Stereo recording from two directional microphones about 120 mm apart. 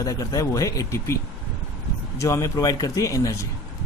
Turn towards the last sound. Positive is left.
turn(degrees=25)  # may be behind; listen again after turning